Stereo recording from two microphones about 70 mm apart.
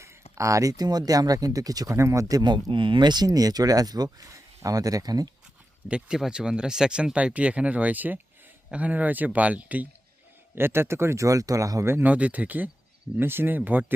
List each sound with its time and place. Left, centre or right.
0.0 s speech: right
2.4 s speech: right
3.2 s speech: right
5.9 s speech: centre
10.5 s speech: right
11.9 s speech: right
12.1 s speech: centre